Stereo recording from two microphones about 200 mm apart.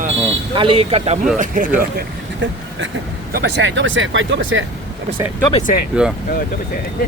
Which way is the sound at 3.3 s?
55° right (ahead or behind).